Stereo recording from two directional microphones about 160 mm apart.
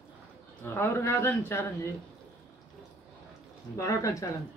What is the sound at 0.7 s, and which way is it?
A man's voice, 15° left (ahead or behind).